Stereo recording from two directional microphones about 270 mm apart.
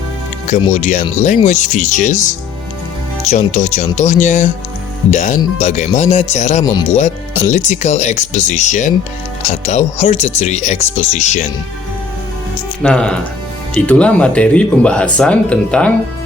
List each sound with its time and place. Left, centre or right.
0.4 s speech: left
3.2 s speech: left
12.8 s speech: centre